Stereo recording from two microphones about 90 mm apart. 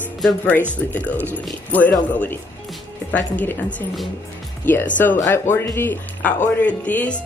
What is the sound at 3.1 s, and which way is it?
Speech, 20° left (ahead or behind).